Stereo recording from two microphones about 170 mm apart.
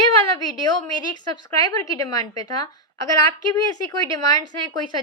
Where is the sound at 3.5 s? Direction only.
20° left (ahead or behind).